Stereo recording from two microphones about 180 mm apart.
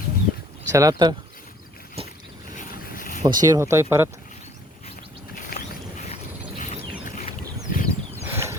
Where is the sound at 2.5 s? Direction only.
50° left (ahead or behind).